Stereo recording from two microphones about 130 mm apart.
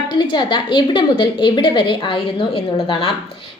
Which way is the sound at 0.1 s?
35° left (ahead or behind).